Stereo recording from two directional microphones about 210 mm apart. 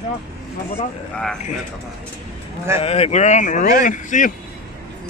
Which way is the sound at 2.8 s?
30° left (ahead or behind).